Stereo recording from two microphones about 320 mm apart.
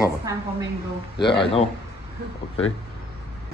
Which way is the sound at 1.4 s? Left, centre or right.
Centre.